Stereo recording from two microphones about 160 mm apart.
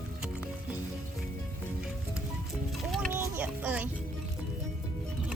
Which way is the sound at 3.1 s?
10° right (ahead or behind).